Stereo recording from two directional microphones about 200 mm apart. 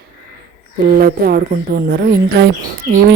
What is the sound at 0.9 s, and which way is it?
Speech, 45° right (ahead or behind).